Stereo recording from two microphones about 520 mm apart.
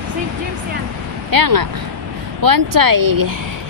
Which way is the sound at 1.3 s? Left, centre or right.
Right.